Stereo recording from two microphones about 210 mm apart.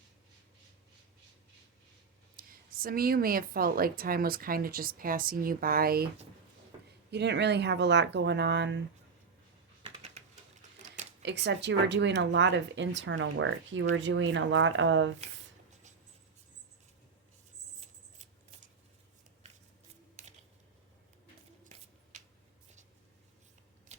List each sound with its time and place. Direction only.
2.3 s a woman's voice: 45° right (ahead or behind)
7.1 s speech: 55° right (ahead or behind)
9.8 s typing: 30° right (ahead or behind)
11.2 s speech: 55° right (ahead or behind)
20.2 s a sound: 35° right (ahead or behind)